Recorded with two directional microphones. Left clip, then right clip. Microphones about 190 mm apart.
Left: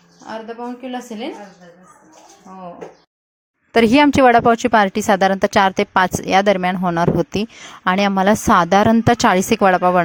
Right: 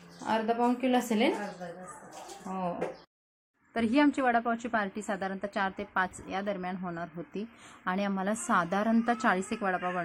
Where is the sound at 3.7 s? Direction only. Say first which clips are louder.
Left 15 dB; 55° left (ahead or behind).